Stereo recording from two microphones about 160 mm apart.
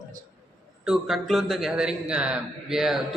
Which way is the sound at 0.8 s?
5° right (ahead or behind).